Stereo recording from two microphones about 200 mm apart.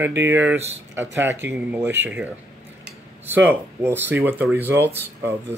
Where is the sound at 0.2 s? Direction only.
10° right (ahead or behind).